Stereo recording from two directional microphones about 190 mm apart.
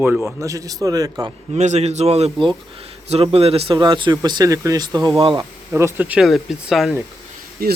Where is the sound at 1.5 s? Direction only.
35° right (ahead or behind); by 6.9 s centre (ahead or behind).